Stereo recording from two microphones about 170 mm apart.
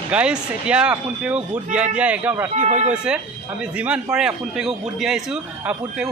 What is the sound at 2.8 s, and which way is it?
Speech, 5° right (ahead or behind).